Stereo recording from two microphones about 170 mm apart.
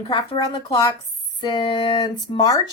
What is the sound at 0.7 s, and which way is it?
A woman's voice, 20° left (ahead or behind).